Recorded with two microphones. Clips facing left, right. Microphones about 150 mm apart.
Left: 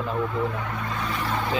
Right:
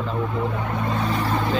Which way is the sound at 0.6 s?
35° right (ahead or behind).